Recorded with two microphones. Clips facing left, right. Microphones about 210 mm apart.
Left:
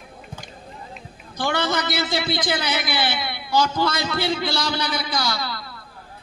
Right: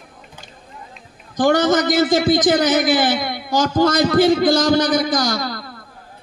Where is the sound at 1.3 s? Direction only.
45° right (ahead or behind).